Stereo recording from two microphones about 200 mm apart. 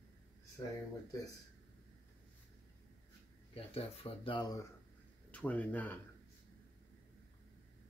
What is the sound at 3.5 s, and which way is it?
Speech, 30° left (ahead or behind).